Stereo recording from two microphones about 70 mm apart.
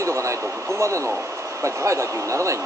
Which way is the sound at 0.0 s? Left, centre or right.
Right.